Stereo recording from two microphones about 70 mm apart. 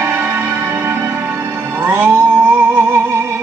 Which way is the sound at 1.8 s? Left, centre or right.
Right.